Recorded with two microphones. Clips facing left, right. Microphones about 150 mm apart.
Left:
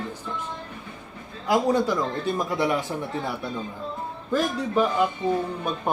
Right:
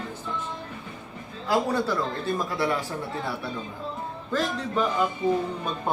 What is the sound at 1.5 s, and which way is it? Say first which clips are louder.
Speech: left 3 dB; 15° left (ahead or behind).